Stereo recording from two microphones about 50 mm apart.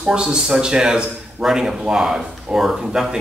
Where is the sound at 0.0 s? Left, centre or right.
Centre.